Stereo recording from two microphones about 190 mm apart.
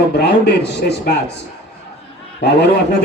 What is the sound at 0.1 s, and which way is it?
A man's voice, 60° left (ahead or behind).